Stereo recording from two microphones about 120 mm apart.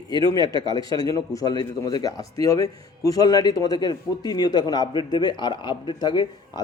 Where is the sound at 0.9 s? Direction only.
30° left (ahead or behind).